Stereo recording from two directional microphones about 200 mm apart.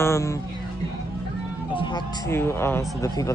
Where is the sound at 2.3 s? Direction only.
10° left (ahead or behind).